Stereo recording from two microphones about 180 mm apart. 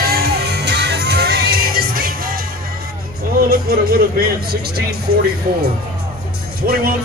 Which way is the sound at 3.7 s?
60° right (ahead or behind).